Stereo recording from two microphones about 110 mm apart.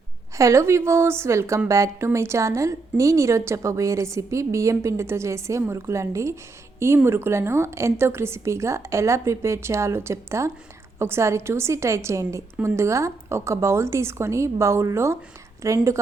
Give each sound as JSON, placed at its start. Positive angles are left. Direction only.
{"t": 0.3, "sound": "a woman's voice", "side_deg": -30}